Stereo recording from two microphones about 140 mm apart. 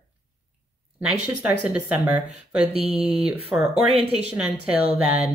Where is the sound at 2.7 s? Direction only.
45° right (ahead or behind).